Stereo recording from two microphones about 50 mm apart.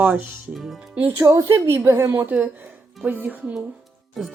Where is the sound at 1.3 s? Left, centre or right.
Right.